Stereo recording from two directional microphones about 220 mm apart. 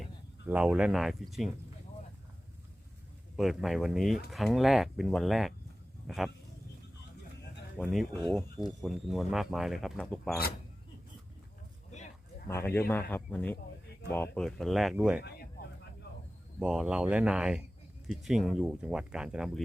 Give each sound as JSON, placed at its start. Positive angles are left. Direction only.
{"t": 0.4, "sound": "speech", "side_deg": -5}
{"t": 3.3, "sound": "speech", "side_deg": 0}
{"t": 7.8, "sound": "speech", "side_deg": 0}
{"t": 8.8, "sound": "speech", "side_deg": 0}
{"t": 12.5, "sound": "speech", "side_deg": 10}
{"t": 15.2, "sound": "a sound", "side_deg": 45}
{"t": 16.6, "sound": "speech", "side_deg": -5}